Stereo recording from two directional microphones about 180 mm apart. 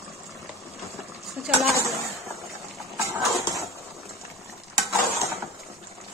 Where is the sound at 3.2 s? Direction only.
Centre (ahead or behind).